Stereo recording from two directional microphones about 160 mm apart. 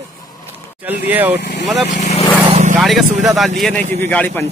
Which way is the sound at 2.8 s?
Centre (ahead or behind).